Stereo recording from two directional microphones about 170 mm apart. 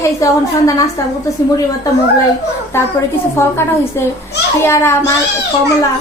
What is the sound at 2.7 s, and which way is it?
Speech, 15° left (ahead or behind).